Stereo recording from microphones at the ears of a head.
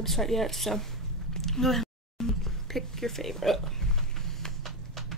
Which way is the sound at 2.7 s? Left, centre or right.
Centre.